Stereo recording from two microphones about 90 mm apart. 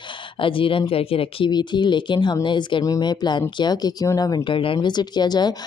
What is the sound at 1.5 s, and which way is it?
A woman's voice, 55° left (ahead or behind).